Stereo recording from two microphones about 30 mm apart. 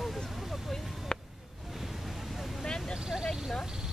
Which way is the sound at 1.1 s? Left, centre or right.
Left.